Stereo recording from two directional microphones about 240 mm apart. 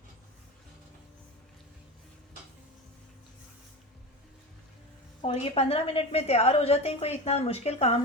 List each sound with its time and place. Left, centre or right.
5.2 s a woman's voice: left